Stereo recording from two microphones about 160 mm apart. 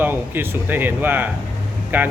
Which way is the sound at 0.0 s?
10° right (ahead or behind).